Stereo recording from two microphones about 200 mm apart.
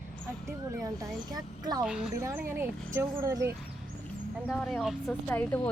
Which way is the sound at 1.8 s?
5° right (ahead or behind).